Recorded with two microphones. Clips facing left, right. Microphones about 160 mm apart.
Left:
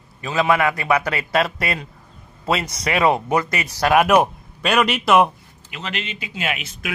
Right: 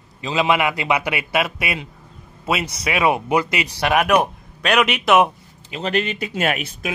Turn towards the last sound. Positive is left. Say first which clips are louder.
# right 5 dB
turn(degrees=-45)  # may be behind; listen again after turning